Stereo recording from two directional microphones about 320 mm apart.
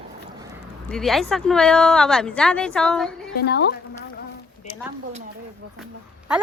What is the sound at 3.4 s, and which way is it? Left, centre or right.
Speech, left.